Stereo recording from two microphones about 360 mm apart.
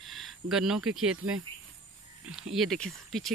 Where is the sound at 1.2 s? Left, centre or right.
Right.